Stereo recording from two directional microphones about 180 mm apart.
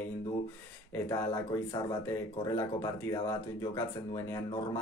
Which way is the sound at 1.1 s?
20° left (ahead or behind).